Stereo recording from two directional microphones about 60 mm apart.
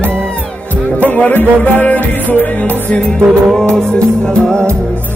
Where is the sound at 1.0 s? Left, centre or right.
Left.